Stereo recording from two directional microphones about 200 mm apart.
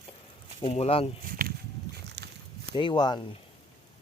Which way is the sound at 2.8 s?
20° left (ahead or behind).